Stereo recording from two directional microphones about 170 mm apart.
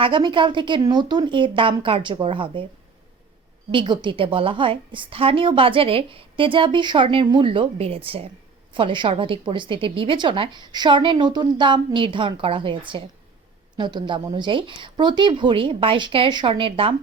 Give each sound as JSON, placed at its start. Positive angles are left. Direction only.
{"t": 0.0, "sound": "a woman's voice", "side_deg": -30}
{"t": 3.7, "sound": "a woman's voice", "side_deg": -30}